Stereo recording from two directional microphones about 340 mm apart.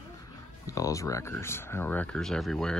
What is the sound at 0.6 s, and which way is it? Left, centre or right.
Speech, centre.